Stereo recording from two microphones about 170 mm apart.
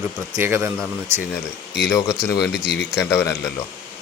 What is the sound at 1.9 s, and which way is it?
Speech, 20° left (ahead or behind).